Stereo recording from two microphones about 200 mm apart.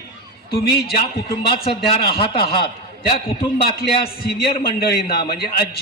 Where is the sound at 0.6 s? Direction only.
50° left (ahead or behind).